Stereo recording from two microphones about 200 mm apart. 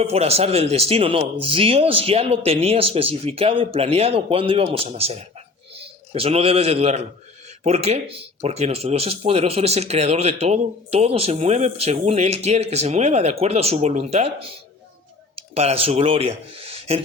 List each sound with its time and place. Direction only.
0.0 s a man's voice: 30° right (ahead or behind)